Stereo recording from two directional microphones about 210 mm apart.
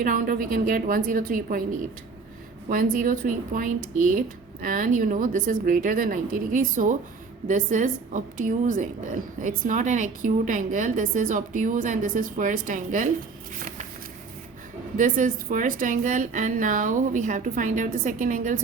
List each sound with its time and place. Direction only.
0.0 s a woman's voice: 40° right (ahead or behind)
14.9 s a woman's voice: 40° right (ahead or behind)